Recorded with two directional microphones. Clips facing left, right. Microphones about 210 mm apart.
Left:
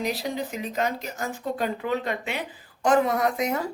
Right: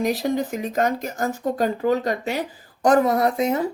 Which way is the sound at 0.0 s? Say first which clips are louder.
Right 6 dB; 45° right (ahead or behind).